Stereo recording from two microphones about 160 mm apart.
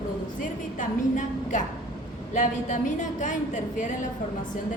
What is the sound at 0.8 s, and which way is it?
A woman's voice, 50° left (ahead or behind).